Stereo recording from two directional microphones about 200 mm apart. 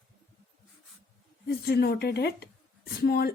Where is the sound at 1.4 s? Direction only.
50° left (ahead or behind).